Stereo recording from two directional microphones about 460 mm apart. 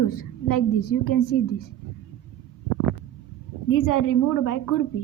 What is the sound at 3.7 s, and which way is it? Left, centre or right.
Speech, left.